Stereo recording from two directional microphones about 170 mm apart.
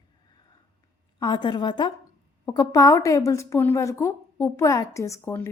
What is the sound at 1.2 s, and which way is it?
Speech, 25° left (ahead or behind).